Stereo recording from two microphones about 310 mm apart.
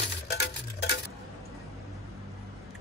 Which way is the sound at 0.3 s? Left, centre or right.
Left.